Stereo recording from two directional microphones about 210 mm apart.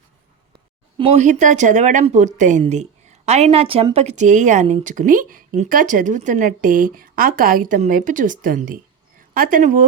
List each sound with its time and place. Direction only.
0.5 s speech: 25° right (ahead or behind)